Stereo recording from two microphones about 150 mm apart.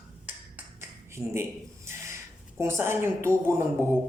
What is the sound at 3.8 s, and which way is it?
Speech, 15° right (ahead or behind).